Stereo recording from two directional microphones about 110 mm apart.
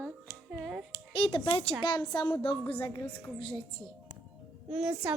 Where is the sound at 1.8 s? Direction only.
40° left (ahead or behind).